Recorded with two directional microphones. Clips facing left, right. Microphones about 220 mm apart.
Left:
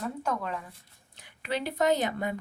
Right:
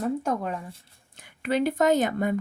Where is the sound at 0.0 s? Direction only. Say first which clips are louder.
Right 6 dB; 45° right (ahead or behind).